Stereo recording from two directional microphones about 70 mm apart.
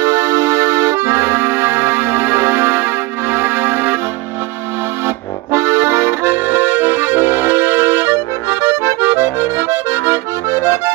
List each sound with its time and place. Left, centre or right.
0.0 s accordion: right
5.0 s accordion: right